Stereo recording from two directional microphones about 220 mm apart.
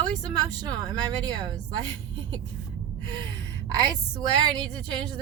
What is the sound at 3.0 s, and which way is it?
Gasp, 20° right (ahead or behind).